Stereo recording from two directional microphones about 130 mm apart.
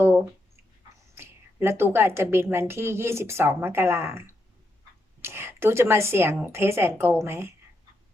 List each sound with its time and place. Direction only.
1.1 s a woman's voice: 20° right (ahead or behind)